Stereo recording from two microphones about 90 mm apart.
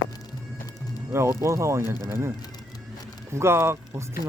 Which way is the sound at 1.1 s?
30° right (ahead or behind).